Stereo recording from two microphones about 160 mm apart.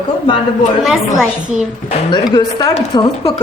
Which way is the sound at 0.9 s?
5° right (ahead or behind).